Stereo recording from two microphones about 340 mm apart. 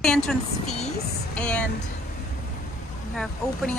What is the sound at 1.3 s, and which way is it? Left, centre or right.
Speech, centre.